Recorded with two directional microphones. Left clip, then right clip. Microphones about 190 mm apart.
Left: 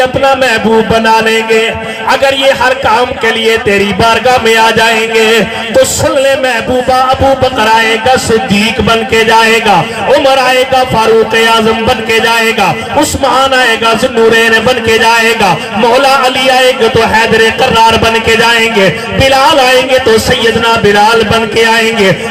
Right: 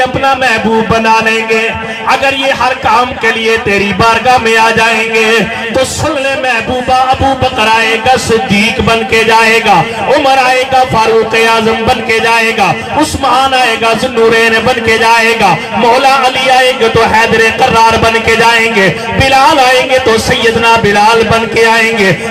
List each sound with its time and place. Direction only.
0.9 s a man's voice: 45° left (ahead or behind)
7.6 s a man's voice: 45° left (ahead or behind)